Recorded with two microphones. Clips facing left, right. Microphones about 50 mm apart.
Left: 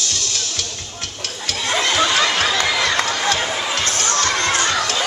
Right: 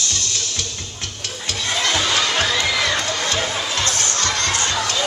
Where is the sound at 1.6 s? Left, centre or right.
Centre.